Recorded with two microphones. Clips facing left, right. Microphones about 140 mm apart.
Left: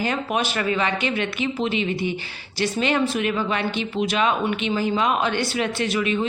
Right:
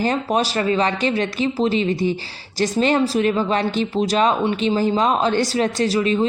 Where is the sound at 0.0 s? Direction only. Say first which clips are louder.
Right 4 dB; 35° right (ahead or behind).